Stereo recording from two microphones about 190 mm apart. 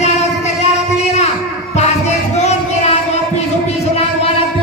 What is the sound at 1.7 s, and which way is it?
Child singing, 35° left (ahead or behind).